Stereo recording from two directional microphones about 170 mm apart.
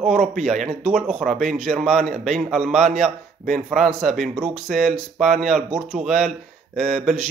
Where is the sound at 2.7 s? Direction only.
45° right (ahead or behind).